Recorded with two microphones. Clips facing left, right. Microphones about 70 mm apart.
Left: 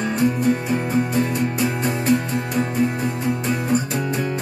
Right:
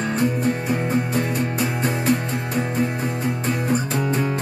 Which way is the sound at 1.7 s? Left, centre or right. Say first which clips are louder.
Left 1 dB; centre.